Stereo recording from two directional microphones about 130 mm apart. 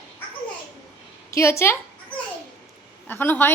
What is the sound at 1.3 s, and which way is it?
Speech, 20° left (ahead or behind).